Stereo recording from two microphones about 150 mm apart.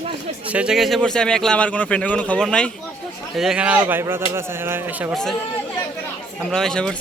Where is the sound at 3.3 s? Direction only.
5° right (ahead or behind).